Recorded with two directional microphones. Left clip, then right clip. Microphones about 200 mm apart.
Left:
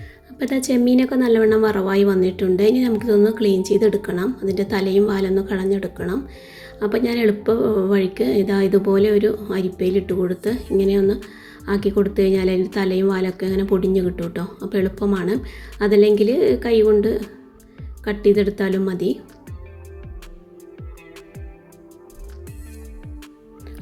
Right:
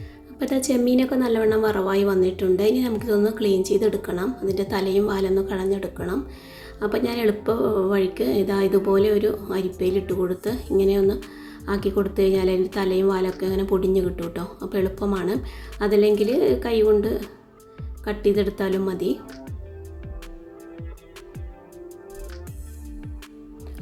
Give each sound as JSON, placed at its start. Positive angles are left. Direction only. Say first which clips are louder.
{"t": 0.3, "sound": "a woman's voice", "louder": "left 2 dB", "side_deg": 15}